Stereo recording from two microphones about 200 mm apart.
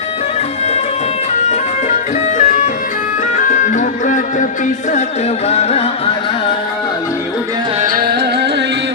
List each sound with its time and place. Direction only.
2.4 s music: 40° left (ahead or behind)
5.5 s music: 30° left (ahead or behind)
7.8 s music: 50° right (ahead or behind)